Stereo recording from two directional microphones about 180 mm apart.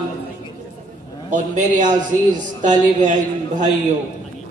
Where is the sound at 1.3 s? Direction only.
45° right (ahead or behind).